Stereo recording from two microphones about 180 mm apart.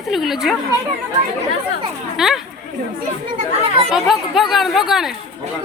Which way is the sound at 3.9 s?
Centre (ahead or behind).